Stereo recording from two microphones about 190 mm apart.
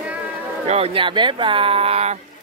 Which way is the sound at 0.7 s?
30° right (ahead or behind).